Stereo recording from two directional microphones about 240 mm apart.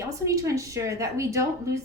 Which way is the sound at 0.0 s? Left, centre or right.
Centre.